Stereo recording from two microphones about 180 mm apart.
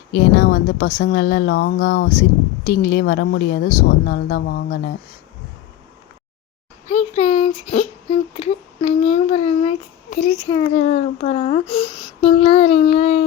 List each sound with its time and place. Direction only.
0.1 s a woman's voice: 60° left (ahead or behind)
6.8 s speech: 40° left (ahead or behind)
10.4 s a child's voice: 25° left (ahead or behind)
10.7 s speech: 40° left (ahead or behind)